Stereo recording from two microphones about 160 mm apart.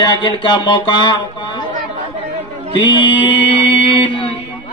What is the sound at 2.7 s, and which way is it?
Mantra, 30° left (ahead or behind).